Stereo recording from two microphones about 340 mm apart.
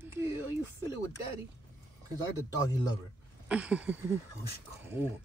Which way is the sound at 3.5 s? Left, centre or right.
Centre.